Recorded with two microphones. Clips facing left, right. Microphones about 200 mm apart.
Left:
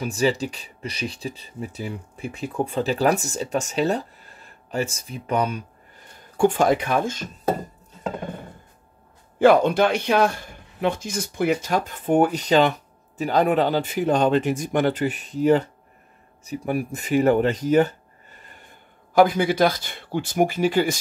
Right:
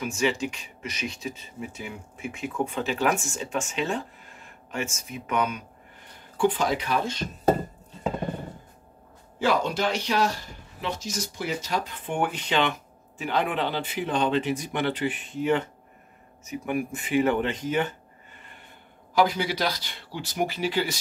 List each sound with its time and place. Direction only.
0.0 s speech: 35° left (ahead or behind)
6.3 s speech: 45° left (ahead or behind)
9.4 s speech: 55° left (ahead or behind); by 17.9 s 40° left (ahead or behind)
19.1 s speech: 50° left (ahead or behind)